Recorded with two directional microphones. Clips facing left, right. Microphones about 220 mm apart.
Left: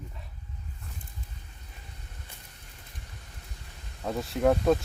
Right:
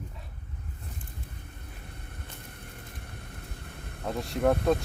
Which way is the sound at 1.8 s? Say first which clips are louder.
Right 4 dB; 60° right (ahead or behind).